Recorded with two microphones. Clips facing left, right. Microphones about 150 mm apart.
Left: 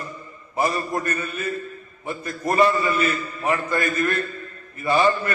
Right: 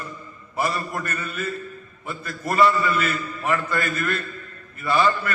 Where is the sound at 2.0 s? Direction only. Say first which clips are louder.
Left 3 dB; 20° left (ahead or behind).